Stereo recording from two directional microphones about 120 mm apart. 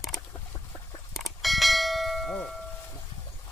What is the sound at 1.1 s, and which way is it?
Church bell, centre (ahead or behind).